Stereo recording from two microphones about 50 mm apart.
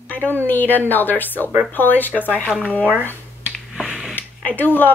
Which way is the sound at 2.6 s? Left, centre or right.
Left.